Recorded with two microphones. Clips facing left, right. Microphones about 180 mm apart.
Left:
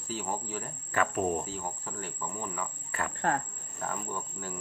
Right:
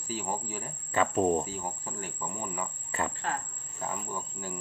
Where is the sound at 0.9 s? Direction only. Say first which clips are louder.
Right 3 dB; 25° right (ahead or behind).